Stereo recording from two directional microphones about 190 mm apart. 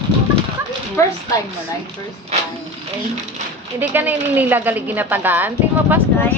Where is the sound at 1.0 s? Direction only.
15° left (ahead or behind).